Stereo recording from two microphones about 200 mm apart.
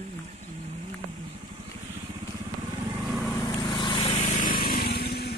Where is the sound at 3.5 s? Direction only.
25° left (ahead or behind); by 5.3 s 55° left (ahead or behind).